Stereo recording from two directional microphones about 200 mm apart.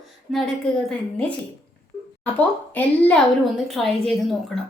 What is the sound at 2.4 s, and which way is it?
A woman's voice, 10° left (ahead or behind).